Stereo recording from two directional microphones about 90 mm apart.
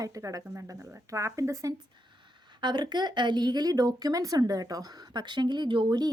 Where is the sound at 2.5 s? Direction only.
55° right (ahead or behind).